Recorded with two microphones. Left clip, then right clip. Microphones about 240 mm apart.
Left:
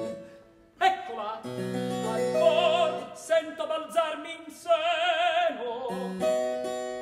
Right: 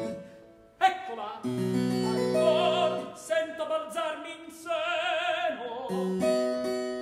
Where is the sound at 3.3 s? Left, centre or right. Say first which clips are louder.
Left 2 dB; centre.